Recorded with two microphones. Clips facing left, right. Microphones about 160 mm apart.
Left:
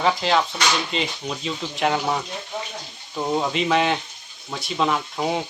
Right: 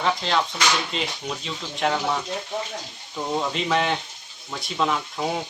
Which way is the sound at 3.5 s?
Centre (ahead or behind).